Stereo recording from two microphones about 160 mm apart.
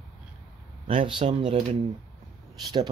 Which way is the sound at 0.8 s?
35° right (ahead or behind).